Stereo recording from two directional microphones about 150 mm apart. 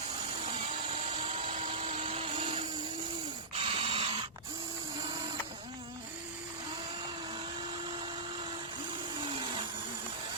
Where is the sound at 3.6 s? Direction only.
35° right (ahead or behind).